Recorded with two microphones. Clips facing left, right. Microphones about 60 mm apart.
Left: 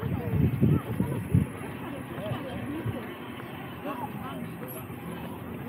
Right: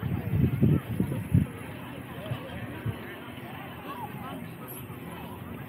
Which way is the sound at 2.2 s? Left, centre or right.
Centre.